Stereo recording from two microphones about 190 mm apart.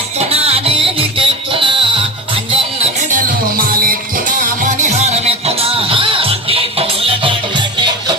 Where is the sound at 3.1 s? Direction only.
45° right (ahead or behind).